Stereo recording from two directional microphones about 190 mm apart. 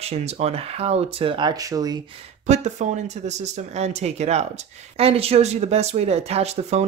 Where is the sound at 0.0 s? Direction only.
35° right (ahead or behind).